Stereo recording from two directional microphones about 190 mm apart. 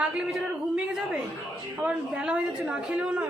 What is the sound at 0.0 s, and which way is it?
Speech, 5° right (ahead or behind).